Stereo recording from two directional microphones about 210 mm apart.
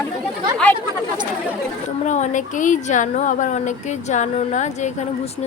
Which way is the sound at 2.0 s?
35° left (ahead or behind).